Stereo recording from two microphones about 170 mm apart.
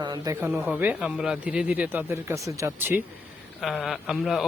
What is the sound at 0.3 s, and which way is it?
Speech, 10° right (ahead or behind).